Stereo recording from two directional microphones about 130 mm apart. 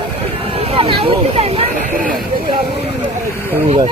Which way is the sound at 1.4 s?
70° right (ahead or behind).